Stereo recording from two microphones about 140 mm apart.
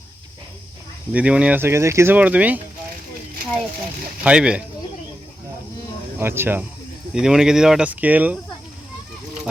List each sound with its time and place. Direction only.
1.1 s speech: 10° right (ahead or behind)
4.2 s speech: 5° right (ahead or behind)
6.1 s speech: 15° right (ahead or behind)
7.1 s speech: 5° right (ahead or behind)